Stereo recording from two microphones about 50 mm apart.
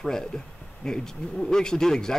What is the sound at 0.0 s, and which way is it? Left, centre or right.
Speech, centre.